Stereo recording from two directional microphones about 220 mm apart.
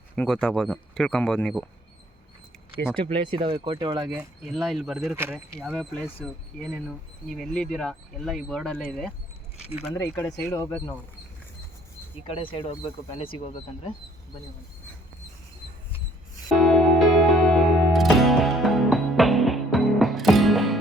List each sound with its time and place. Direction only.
0.2 s speech: 5° left (ahead or behind)
3.0 s speech: 25° right (ahead or behind)
4.5 s speech: centre (ahead or behind)
12.2 s speech: 25° left (ahead or behind)
16.6 s music: centre (ahead or behind)